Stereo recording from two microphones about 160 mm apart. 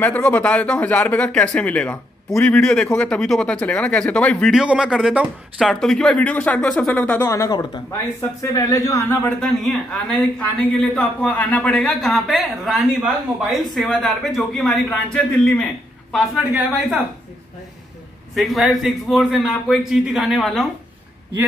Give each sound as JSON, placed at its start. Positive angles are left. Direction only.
{"t": 0.0, "sound": "speech", "side_deg": 10}
{"t": 4.5, "sound": "speech", "side_deg": -5}
{"t": 7.2, "sound": "speech", "side_deg": 20}
{"t": 9.4, "sound": "speech", "side_deg": 5}
{"t": 18.3, "sound": "speech", "side_deg": 0}